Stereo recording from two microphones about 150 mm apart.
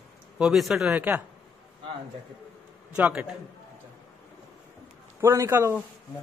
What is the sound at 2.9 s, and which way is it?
Speech, 10° right (ahead or behind).